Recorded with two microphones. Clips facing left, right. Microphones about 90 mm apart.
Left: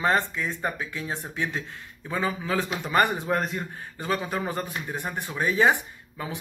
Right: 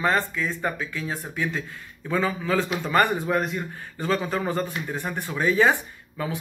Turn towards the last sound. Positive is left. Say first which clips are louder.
# right 4 dB
turn(degrees=20)  # may be behind; listen again after turning